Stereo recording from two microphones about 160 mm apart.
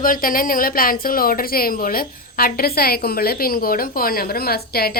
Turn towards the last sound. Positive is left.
turn(degrees=75)  # may be behind; listen again after turning